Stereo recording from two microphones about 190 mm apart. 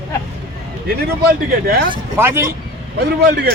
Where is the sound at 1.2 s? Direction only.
55° right (ahead or behind).